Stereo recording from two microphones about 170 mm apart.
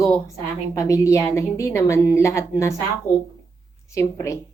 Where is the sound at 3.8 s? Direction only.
15° left (ahead or behind).